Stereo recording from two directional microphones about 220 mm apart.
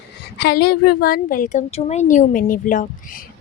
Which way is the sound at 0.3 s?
45° left (ahead or behind).